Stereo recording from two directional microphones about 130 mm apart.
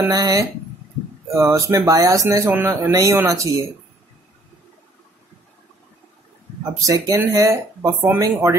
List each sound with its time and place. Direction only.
0.1 s speech: 25° right (ahead or behind)
6.9 s speech: 25° right (ahead or behind)